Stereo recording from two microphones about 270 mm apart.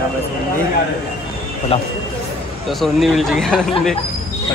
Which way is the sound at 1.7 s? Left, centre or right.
Left.